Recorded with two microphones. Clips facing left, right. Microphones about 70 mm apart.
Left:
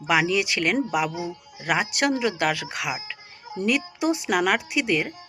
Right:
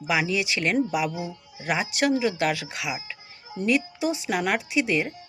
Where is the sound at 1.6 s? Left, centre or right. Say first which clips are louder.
Left 1 dB; left.